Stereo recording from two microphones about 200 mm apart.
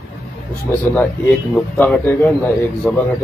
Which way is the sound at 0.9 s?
10° left (ahead or behind).